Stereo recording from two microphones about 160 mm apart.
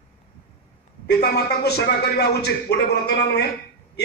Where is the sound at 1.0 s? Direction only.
90° left.